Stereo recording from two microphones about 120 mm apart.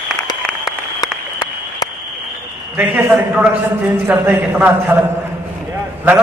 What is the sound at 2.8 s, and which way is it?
A man's voice, 15° right (ahead or behind).